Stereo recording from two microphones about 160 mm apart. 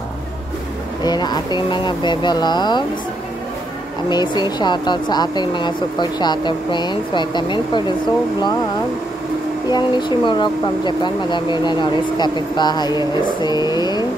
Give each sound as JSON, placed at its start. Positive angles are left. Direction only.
{"t": 1.0, "sound": "speech", "side_deg": 25}
{"t": 4.1, "sound": "speech", "side_deg": 25}
{"t": 9.7, "sound": "speech", "side_deg": 25}